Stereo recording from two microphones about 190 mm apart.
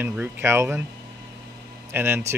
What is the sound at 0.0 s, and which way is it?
Speech, 10° right (ahead or behind).